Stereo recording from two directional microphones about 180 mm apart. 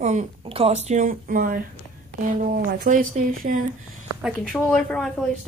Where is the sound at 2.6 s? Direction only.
50° right (ahead or behind).